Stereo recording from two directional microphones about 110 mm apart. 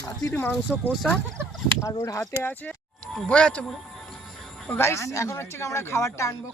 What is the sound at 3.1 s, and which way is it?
Speech, 10° left (ahead or behind).